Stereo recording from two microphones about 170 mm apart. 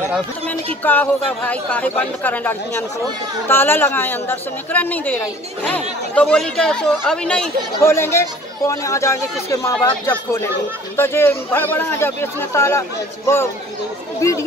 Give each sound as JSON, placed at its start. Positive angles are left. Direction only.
{"t": 0.8, "sound": "a woman's voice", "side_deg": 10}
{"t": 7.8, "sound": "a woman's voice", "side_deg": 15}